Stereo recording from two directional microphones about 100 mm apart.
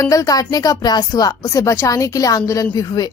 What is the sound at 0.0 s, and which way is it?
A woman's voice, 35° left (ahead or behind).